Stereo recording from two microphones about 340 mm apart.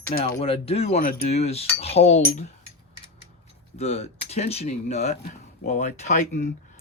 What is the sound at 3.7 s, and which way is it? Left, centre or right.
Speech, centre.